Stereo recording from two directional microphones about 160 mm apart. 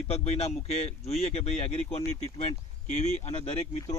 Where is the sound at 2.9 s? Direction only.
45° left (ahead or behind).